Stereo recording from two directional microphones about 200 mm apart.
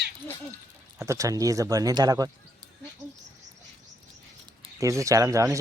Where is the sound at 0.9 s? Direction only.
15° right (ahead or behind).